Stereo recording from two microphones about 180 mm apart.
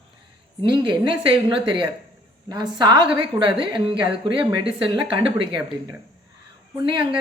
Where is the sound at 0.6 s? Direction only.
25° right (ahead or behind).